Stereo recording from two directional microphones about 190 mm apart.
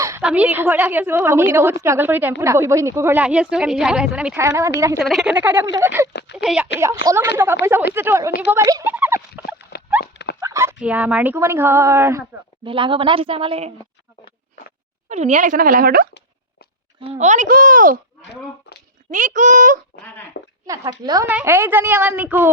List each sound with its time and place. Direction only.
0.2 s a woman's voice: 5° right (ahead or behind)
4.4 s speech: 15° right (ahead or behind)
4.9 s speech: centre (ahead or behind)
6.3 s a woman's voice: 5° right (ahead or behind)
6.7 s speech: 15° right (ahead or behind)
10.0 s dog: 60° left (ahead or behind)
10.4 s speech: 15° right (ahead or behind)
12.6 s a woman's voice: 25° right (ahead or behind)
15.1 s speech: 35° right (ahead or behind)
17.1 s speech: 35° right (ahead or behind)
18.7 s a sound: 60° left (ahead or behind)
19.1 s speech: 40° right (ahead or behind)
20.4 s speech: 65° left (ahead or behind)
21.0 s a woman's voice: 20° right (ahead or behind)